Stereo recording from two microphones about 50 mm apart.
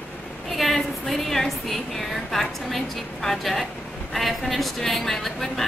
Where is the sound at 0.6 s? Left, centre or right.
Centre.